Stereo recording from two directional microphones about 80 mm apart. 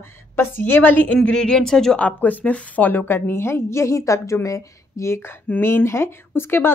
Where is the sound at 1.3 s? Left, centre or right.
Centre.